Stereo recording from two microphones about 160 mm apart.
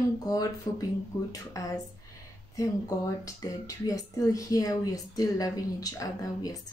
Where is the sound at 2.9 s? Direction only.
20° left (ahead or behind).